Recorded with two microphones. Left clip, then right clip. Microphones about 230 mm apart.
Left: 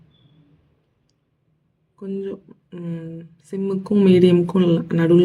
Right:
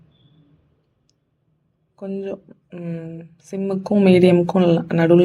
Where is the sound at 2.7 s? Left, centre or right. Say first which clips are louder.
Right 1 dB; centre.